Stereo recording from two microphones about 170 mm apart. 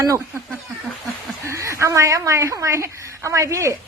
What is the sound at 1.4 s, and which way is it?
A woman's voice, 15° right (ahead or behind).